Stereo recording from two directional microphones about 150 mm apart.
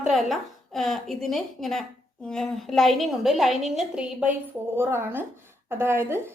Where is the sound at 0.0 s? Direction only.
Centre (ahead or behind).